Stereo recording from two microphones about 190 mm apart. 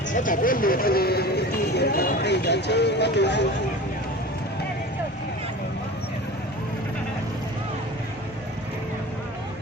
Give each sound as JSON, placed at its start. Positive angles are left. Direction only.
{"t": 0.1, "sound": "speech", "side_deg": 45}